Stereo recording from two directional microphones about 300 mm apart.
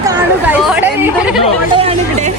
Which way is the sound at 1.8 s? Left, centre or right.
Centre.